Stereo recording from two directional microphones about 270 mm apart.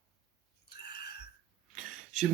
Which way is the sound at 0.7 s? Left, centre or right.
Left.